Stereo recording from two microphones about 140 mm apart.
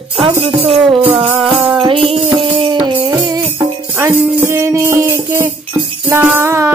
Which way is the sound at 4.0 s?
15° right (ahead or behind).